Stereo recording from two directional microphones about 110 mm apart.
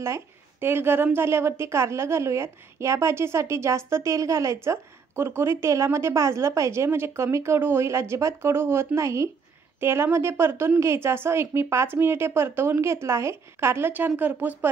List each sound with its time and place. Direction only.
0.0 s a woman's voice: 25° right (ahead or behind)